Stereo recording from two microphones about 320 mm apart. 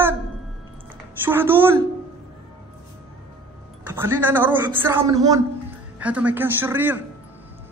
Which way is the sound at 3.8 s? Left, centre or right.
Centre.